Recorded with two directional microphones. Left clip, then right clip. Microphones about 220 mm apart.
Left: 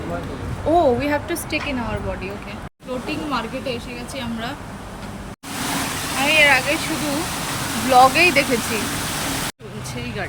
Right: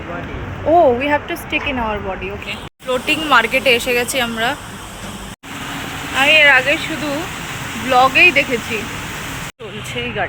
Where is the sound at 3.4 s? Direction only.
25° right (ahead or behind).